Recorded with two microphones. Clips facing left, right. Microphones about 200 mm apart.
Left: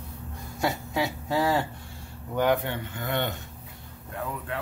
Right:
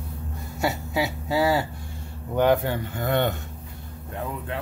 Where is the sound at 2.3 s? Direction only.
30° right (ahead or behind).